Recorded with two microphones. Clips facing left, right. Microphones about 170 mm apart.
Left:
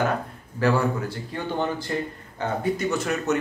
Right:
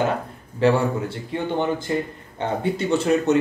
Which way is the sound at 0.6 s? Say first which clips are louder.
Right 3 dB; 25° right (ahead or behind).